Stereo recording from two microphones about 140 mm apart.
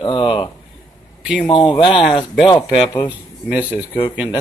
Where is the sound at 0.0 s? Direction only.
35° left (ahead or behind).